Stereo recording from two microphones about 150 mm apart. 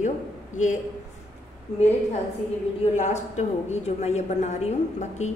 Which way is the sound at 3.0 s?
50° left (ahead or behind).